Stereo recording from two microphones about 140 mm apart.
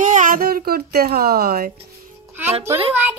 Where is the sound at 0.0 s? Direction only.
65° right (ahead or behind); by 1.7 s 90° right.